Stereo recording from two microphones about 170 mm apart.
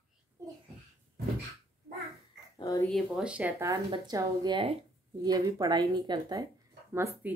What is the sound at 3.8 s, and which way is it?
A woman's voice, 25° right (ahead or behind).